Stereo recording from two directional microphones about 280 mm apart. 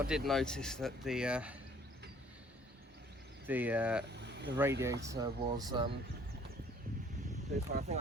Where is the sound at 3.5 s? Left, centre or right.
Centre.